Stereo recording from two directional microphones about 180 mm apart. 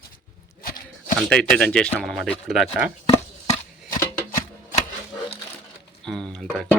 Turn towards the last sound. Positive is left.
turn(degrees=5)  # may be behind; listen again after turning